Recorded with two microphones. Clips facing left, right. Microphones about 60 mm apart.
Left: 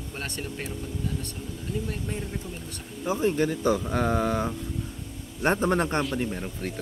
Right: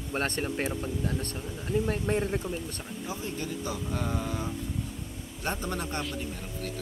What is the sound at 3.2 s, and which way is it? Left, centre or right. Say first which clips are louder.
Speech: left 13 dB; left.